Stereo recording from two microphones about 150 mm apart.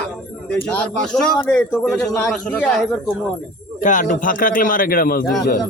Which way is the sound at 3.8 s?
60° left (ahead or behind).